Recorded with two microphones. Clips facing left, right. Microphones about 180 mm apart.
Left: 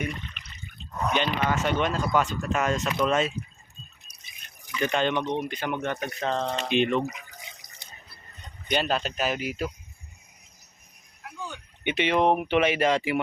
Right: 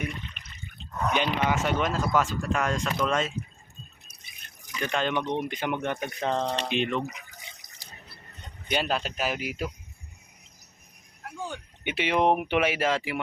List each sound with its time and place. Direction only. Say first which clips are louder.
1.1 s speech: even; 10° right (ahead or behind); by 3.3 s 5° left (ahead or behind)
4.9 s speech: left 2 dB; centre (ahead or behind)
5.4 s speech: even; 20° right (ahead or behind)
6.6 s speech: left 4 dB; centre (ahead or behind)
8.6 s speech: left 2 dB; 5° right (ahead or behind)
11.2 s a sound: right 3 dB; 50° right (ahead or behind)
11.8 s speech: left 2 dB; 5° right (ahead or behind)